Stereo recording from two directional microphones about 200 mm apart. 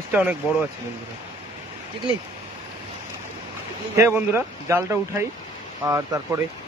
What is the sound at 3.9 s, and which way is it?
Speech, 15° right (ahead or behind).